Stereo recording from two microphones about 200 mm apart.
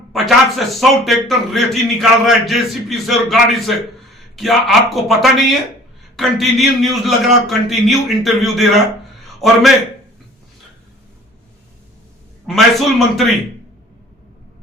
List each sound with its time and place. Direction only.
0.1 s a man's voice: centre (ahead or behind)
12.5 s a man's voice: centre (ahead or behind)